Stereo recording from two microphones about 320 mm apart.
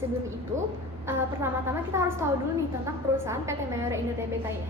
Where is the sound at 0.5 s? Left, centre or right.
Centre.